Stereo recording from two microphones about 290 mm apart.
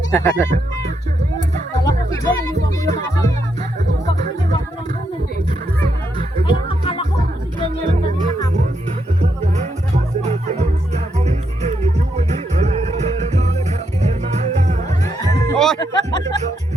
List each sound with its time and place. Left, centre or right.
0.1 s speech: centre
1.8 s music: centre
6.4 s music: centre
7.2 s music: right
10.2 s music: right
14.8 s music: centre
15.8 s a sound: centre